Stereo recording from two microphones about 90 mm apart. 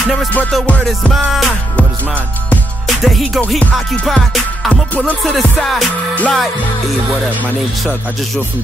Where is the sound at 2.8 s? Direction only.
Centre (ahead or behind).